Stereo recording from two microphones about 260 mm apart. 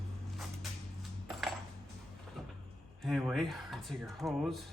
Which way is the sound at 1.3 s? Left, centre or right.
Centre.